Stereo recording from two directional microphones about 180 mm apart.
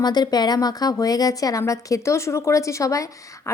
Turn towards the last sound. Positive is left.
turn(degrees=20)  # may be behind; listen again after turning